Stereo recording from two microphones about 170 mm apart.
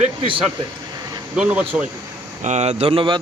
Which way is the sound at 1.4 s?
10° right (ahead or behind).